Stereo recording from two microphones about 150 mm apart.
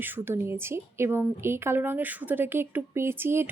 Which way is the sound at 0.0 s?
15° right (ahead or behind).